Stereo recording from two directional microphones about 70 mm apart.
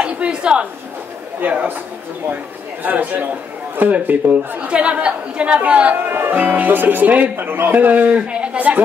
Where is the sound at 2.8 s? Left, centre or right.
Right.